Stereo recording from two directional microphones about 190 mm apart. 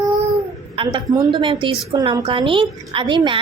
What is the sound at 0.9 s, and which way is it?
A woman's voice, 25° right (ahead or behind).